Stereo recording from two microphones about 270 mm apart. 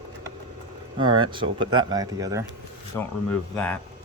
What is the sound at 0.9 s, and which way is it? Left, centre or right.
Speech, centre.